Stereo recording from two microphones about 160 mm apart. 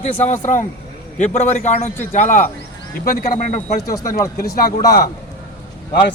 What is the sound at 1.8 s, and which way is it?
Speech, 15° left (ahead or behind).